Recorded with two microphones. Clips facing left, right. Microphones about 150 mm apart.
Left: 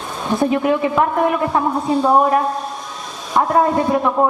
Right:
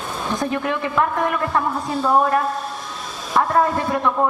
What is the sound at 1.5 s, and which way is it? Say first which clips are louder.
A woman's voice: left 5 dB; 20° left (ahead or behind).